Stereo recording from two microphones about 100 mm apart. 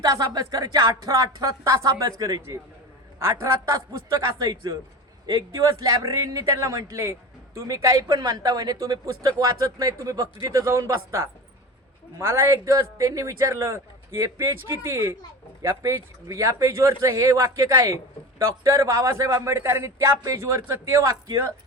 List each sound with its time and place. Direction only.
0.0 s a man's voice: 40° right (ahead or behind)
3.7 s a man's voice: 40° right (ahead or behind)